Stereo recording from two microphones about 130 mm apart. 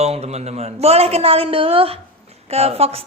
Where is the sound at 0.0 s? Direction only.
55° right (ahead or behind).